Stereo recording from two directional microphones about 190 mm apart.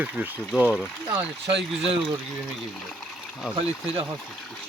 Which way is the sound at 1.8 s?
30° right (ahead or behind).